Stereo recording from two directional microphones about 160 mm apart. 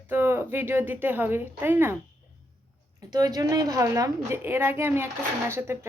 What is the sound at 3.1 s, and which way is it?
Speech, 25° right (ahead or behind).